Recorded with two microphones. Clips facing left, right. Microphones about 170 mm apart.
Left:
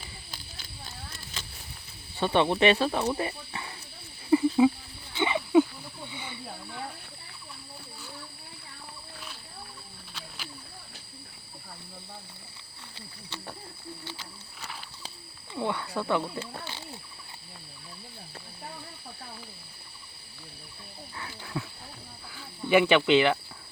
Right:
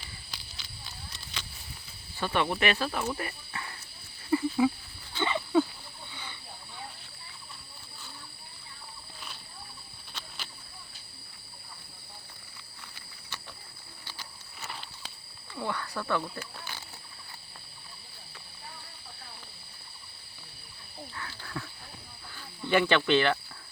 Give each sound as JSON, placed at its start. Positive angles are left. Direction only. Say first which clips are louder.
{"t": 0.3, "sound": "a sound", "louder": "left 2 dB", "side_deg": 50}
{"t": 2.1, "sound": "speech", "louder": "left 5 dB", "side_deg": 25}
{"t": 4.3, "sound": "cricket", "louder": "left 5 dB", "side_deg": 20}
{"t": 5.1, "sound": "wild animals", "louder": "left 4 dB", "side_deg": 15}
{"t": 10.2, "sound": "a sound", "louder": "left 1 dB", "side_deg": 10}
{"t": 14.0, "sound": "a sound", "louder": "left 5 dB", "side_deg": 25}
{"t": 15.5, "sound": "speech", "louder": "left 4 dB", "side_deg": 20}
{"t": 21.2, "sound": "wild animals", "louder": "left 4 dB", "side_deg": 15}
{"t": 22.4, "sound": "speech", "louder": "left 4 dB", "side_deg": 10}